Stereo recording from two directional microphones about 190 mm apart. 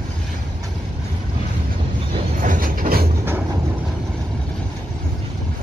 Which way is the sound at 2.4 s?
45° right (ahead or behind).